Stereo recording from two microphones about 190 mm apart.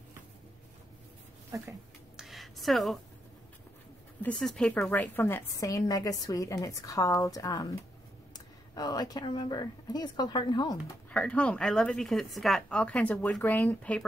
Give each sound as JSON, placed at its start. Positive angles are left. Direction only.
{"t": 2.1, "sound": "a sound", "side_deg": 0}
{"t": 4.2, "sound": "a woman's voice", "side_deg": 5}
{"t": 8.7, "sound": "speech", "side_deg": 20}
{"t": 11.1, "sound": "a woman's voice", "side_deg": 5}